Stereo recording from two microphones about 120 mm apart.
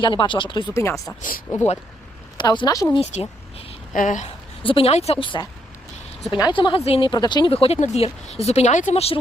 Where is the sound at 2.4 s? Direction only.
40° left (ahead or behind).